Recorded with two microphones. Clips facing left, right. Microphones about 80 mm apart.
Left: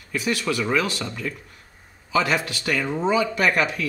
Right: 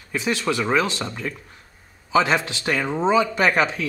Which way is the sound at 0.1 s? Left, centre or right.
Right.